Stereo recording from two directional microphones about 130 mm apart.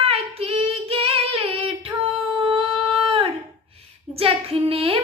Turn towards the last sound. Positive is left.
turn(degrees=-45)  # may be behind; listen again after turning